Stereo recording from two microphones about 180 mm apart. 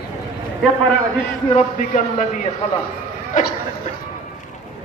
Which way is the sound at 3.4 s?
45° left (ahead or behind).